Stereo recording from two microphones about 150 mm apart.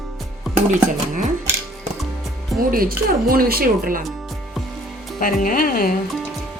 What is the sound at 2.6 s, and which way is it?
Speech, 75° right (ahead or behind).